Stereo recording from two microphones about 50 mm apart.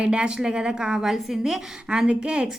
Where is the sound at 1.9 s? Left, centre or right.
Right.